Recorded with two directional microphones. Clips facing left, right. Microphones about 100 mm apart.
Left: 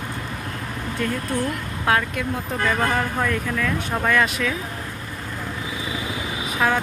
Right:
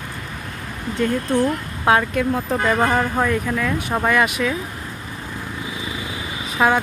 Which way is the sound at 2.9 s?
15° right (ahead or behind).